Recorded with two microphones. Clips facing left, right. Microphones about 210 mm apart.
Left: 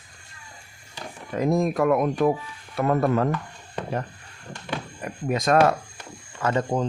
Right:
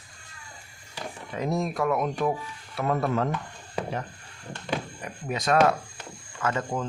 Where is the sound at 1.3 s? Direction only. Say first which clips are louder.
Left 6 dB; 50° left (ahead or behind).